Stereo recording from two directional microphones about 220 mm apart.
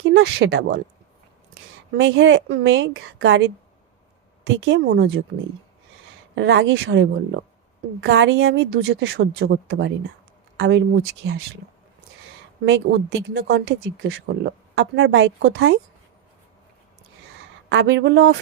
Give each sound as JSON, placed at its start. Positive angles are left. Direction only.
{"t": 0.0, "sound": "a woman's voice", "side_deg": -50}
{"t": 2.0, "sound": "speech", "side_deg": -55}
{"t": 4.6, "sound": "a woman's voice", "side_deg": -50}
{"t": 6.3, "sound": "a woman's voice", "side_deg": -55}
{"t": 12.6, "sound": "speech", "side_deg": -60}
{"t": 17.7, "sound": "speech", "side_deg": -55}